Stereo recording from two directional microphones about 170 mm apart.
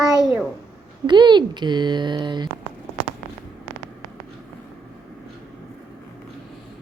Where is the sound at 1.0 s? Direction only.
25° right (ahead or behind).